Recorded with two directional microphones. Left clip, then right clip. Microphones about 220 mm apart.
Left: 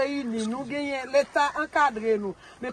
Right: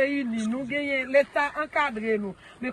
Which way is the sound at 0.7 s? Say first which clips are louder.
Right 3 dB; 15° left (ahead or behind).